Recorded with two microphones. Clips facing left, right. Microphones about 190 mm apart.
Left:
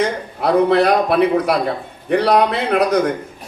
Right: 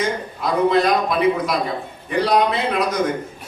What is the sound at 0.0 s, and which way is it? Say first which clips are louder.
A man's voice: left 4 dB; 65° left (ahead or behind).